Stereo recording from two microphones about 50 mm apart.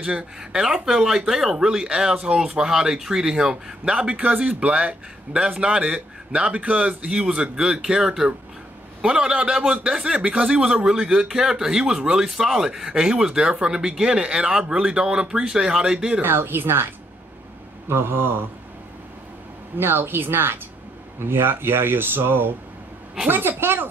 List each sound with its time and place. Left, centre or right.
0.0 s a man's voice: right
0.4 s speech: centre
2.4 s a man's voice: centre
15.4 s speech: centre
16.2 s speech: right
19.8 s a woman's voice: right